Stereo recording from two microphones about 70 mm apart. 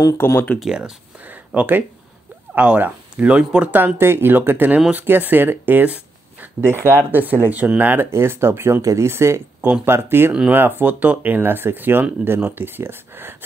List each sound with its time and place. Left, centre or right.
0.2 s speech: left
0.6 s speech: centre
1.2 s a sound: right
2.5 s speech: right
4.0 s speech: right